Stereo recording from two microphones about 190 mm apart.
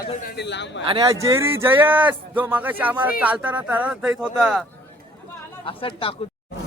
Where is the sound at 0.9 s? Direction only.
25° right (ahead or behind).